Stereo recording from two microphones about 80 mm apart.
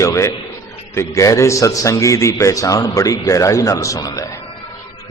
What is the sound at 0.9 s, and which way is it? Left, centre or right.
A man's voice, left.